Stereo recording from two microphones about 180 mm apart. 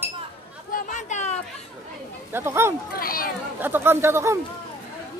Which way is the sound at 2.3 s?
15° right (ahead or behind).